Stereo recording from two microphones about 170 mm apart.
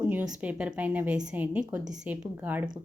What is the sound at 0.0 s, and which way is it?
Speech, 10° right (ahead or behind).